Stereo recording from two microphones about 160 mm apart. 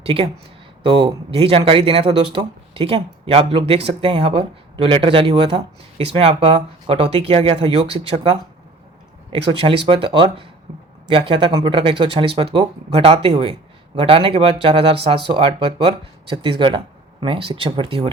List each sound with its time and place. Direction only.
0.0 s speech: 35° right (ahead or behind)
9.5 s speech: 35° right (ahead or behind)